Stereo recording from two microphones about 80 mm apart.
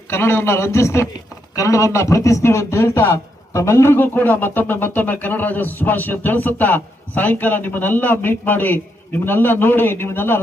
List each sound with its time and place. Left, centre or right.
0.1 s a man's voice: left